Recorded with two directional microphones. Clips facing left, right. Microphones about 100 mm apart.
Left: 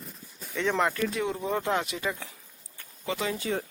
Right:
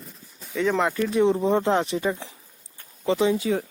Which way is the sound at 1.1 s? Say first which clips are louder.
Right 9 dB; 25° right (ahead or behind).